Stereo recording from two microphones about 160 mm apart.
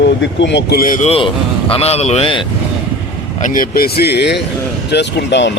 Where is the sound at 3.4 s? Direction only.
65° left (ahead or behind).